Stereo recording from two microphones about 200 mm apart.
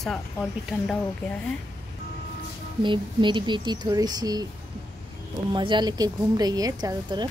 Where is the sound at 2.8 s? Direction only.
25° right (ahead or behind).